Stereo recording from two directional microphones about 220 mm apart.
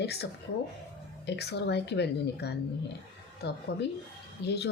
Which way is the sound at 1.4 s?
50° left (ahead or behind).